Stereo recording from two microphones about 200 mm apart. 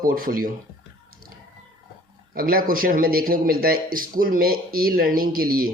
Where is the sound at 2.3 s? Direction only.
50° right (ahead or behind).